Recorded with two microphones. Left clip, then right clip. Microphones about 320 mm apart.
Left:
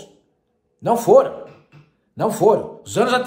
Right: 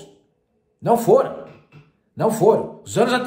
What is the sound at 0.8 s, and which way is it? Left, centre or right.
A man's voice, centre.